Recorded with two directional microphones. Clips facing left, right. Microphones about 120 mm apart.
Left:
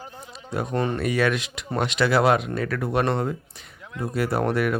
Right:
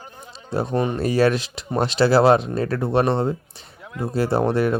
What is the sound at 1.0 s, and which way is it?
Speech, 35° right (ahead or behind).